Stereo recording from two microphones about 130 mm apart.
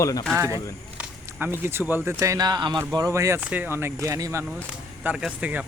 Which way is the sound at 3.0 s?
20° right (ahead or behind).